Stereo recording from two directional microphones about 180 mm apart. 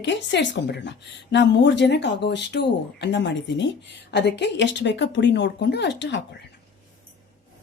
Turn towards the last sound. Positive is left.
turn(degrees=75)  # may be behind; listen again after turning